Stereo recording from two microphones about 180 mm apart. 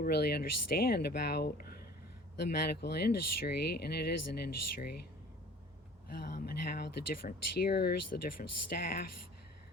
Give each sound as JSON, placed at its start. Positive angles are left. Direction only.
{"t": 0.0, "sound": "speech", "side_deg": 65}
{"t": 6.1, "sound": "speech", "side_deg": 55}